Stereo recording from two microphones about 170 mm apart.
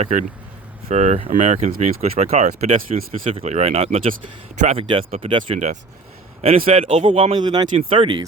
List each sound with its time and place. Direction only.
0.0 s speech: 45° right (ahead or behind); by 8.2 s 30° right (ahead or behind)